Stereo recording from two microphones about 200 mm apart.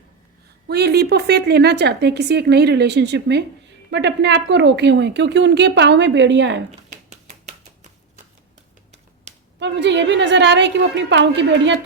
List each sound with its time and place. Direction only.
0.7 s a woman's voice: 55° right (ahead or behind)
6.7 s a sound: 35° right (ahead or behind)
9.6 s a woman's voice: 60° right (ahead or behind)